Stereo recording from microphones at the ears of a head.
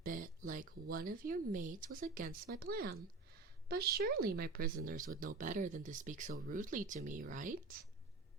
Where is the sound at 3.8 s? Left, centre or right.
Right.